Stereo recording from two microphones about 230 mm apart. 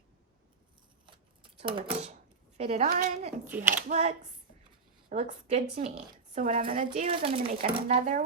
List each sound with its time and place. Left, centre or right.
1.0 s shuffling cards: right
2.6 s speech: right
3.5 s speech: centre
3.8 s speech: right